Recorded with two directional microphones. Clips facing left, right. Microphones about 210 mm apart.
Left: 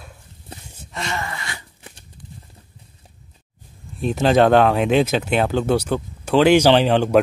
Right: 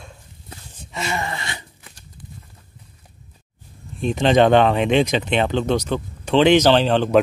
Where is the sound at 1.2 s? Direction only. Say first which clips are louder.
Right 2 dB; 25° right (ahead or behind).